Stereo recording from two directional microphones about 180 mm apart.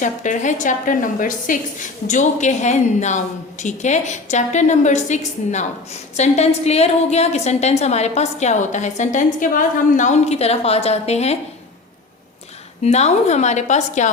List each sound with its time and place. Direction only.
0.0 s a woman's voice: 45° left (ahead or behind)
12.8 s a woman's voice: 40° left (ahead or behind)